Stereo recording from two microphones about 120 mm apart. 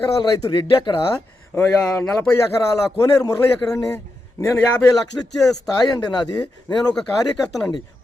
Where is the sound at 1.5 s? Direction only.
20° left (ahead or behind).